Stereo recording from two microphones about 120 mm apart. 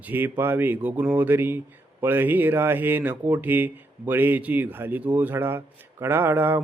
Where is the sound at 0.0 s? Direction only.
15° right (ahead or behind).